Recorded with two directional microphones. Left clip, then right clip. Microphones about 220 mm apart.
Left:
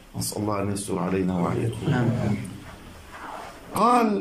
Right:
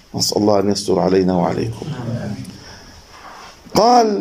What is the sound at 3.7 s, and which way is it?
Speech, 35° right (ahead or behind).